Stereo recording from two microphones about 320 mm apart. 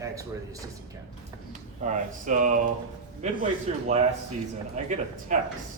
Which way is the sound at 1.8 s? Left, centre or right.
Right.